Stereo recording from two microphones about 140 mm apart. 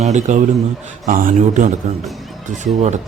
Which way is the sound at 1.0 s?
75° right (ahead or behind).